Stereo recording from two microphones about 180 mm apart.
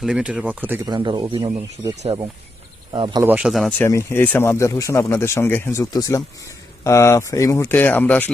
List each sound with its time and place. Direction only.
0.0 s speech: 5° right (ahead or behind)
0.9 s speech: 25° right (ahead or behind)
2.9 s speech: 25° right (ahead or behind)
3.2 s speech: 5° right (ahead or behind)
3.8 s speech: 15° left (ahead or behind)